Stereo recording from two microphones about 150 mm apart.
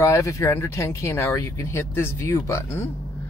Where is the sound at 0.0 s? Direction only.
20° left (ahead or behind).